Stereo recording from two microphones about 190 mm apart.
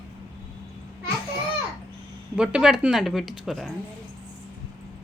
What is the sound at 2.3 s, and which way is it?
Speech, 5° right (ahead or behind).